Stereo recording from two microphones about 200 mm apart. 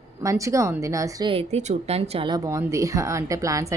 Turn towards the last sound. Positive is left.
turn(degrees=-15)  # may be behind; listen again after turning